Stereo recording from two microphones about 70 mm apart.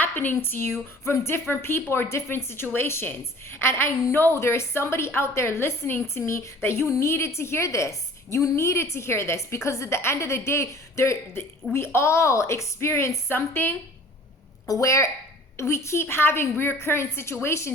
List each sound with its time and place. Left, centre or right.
0.0 s a woman's voice: left
14.7 s a woman's voice: left